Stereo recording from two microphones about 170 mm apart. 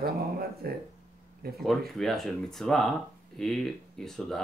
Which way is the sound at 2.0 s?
Centre (ahead or behind).